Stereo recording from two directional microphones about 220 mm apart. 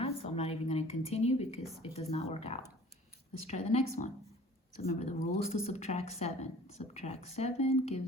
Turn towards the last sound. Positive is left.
turn(degrees=30)  # may be behind; listen again after turning